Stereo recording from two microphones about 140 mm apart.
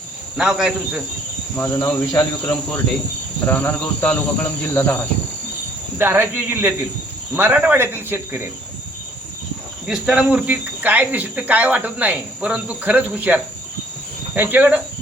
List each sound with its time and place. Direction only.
0.3 s speech: 5° right (ahead or behind)
1.5 s cricket: 20° left (ahead or behind)
6.0 s speech: 15° right (ahead or behind)
9.8 s speech: 5° right (ahead or behind)